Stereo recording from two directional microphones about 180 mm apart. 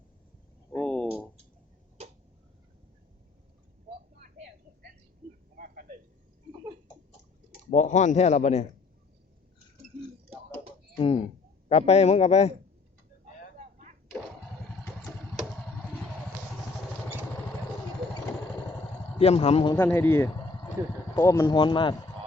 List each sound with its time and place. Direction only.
0.7 s a sound: 5° left (ahead or behind)
7.7 s speech: 40° left (ahead or behind)
10.9 s speech: 30° left (ahead or behind)
13.6 s a sound: 40° right (ahead or behind)
19.2 s speech: 35° left (ahead or behind)
19.7 s a man's voice: 10° left (ahead or behind)